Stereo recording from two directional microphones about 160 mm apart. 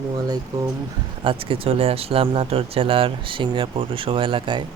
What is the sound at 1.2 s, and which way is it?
Speech, 35° right (ahead or behind).